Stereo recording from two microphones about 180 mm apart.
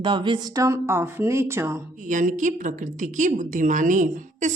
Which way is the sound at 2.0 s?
45° right (ahead or behind).